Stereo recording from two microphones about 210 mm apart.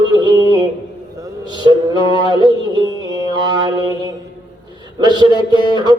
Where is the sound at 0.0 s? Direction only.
20° right (ahead or behind).